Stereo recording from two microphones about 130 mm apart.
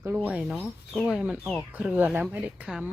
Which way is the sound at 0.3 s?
5° right (ahead or behind).